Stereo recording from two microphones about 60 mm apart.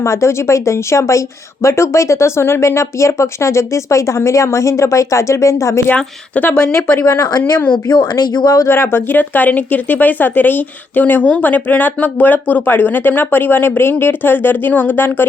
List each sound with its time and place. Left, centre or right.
0.0 s speech: left
5.9 s speech: left
8.1 s speech: left
8.6 s speech: left